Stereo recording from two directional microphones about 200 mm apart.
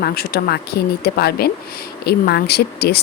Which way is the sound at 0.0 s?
50° left (ahead or behind).